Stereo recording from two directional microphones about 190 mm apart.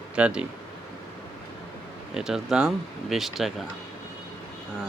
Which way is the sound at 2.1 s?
5° right (ahead or behind).